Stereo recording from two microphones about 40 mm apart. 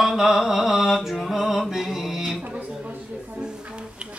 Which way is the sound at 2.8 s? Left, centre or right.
Right.